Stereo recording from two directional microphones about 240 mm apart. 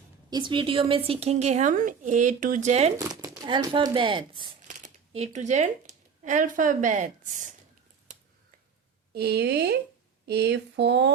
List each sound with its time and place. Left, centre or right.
0.3 s a woman's voice: centre
3.0 s a woman's voice: centre; by 7.5 s right
9.1 s a sound: right